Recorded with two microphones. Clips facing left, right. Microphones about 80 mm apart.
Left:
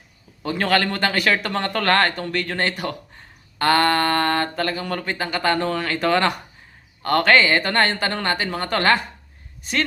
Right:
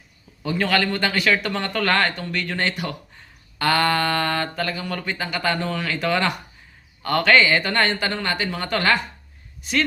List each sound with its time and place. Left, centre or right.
0.4 s speech: left